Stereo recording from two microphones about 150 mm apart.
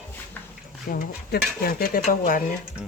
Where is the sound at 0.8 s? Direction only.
75° left (ahead or behind).